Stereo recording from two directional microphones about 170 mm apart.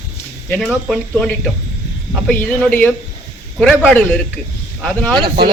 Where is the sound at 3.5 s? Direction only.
Centre (ahead or behind).